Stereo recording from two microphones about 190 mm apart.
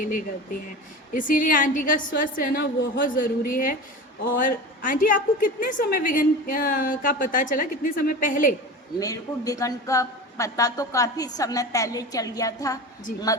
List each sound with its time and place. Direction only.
1.1 s a woman's voice: 45° left (ahead or behind)
9.0 s a woman's voice: 20° left (ahead or behind)